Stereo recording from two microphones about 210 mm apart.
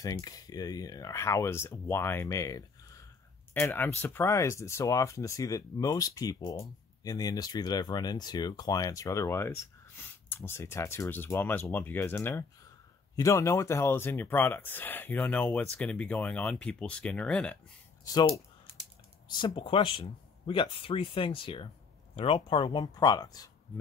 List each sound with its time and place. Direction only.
0.0 s speech: 15° left (ahead or behind)
18.0 s speech: 20° left (ahead or behind)